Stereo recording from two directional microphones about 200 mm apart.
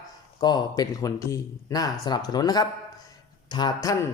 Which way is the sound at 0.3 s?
20° left (ahead or behind).